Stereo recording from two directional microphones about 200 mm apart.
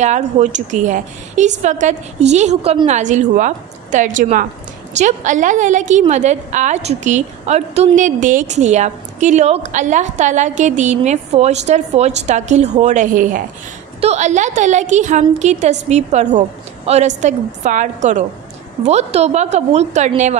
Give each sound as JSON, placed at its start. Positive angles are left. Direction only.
{"t": 0.0, "sound": "a woman's voice", "side_deg": -35}